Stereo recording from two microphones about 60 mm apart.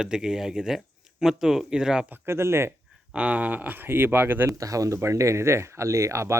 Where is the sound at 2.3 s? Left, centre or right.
Right.